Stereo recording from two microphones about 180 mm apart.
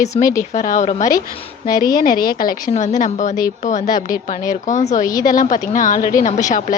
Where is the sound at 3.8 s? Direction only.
20° left (ahead or behind).